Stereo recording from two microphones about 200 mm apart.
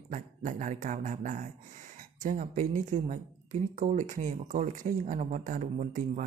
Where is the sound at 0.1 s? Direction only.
40° right (ahead or behind).